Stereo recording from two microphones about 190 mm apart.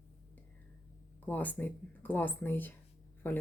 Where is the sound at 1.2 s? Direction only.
10° left (ahead or behind).